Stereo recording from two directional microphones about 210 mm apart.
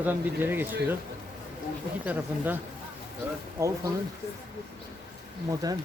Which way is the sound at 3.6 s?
15° right (ahead or behind).